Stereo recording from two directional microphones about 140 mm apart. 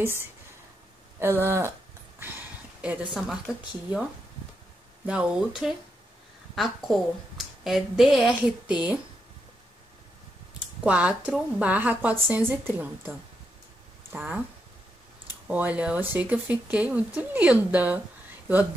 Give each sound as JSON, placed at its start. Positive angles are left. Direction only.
{"t": 0.0, "sound": "a woman's voice", "side_deg": -15}
{"t": 5.0, "sound": "a woman's voice", "side_deg": -5}
{"t": 10.8, "sound": "a woman's voice", "side_deg": -10}
{"t": 14.1, "sound": "a woman's voice", "side_deg": -10}